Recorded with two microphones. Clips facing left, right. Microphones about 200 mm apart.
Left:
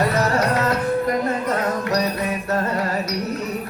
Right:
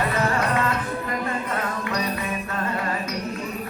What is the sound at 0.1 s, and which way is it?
Music, 40° left (ahead or behind).